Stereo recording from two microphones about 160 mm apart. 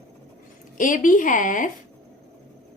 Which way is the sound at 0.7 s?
55° left (ahead or behind).